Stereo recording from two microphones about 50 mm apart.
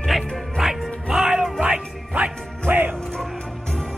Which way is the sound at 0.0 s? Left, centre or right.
Centre.